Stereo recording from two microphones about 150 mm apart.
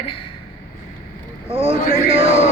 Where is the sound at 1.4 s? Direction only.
40° right (ahead or behind).